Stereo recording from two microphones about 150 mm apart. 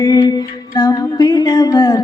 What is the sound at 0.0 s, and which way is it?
Music, 25° left (ahead or behind).